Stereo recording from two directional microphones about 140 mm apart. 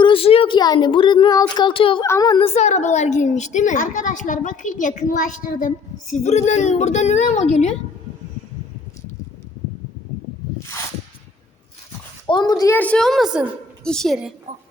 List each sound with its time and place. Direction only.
0.0 s speech: 40° left (ahead or behind)
2.0 s a woman's voice: 20° left (ahead or behind)
2.3 s a woman's voice: 45° left (ahead or behind)
12.3 s a woman's voice: 30° left (ahead or behind)
12.7 s a woman's voice: 10° left (ahead or behind)